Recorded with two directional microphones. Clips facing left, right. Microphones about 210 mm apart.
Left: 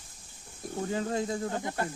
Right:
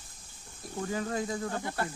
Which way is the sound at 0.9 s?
25° left (ahead or behind).